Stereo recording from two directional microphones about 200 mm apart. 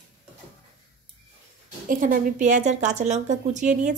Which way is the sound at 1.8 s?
45° right (ahead or behind).